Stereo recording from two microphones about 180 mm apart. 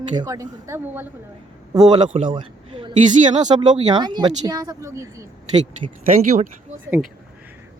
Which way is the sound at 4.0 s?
25° right (ahead or behind).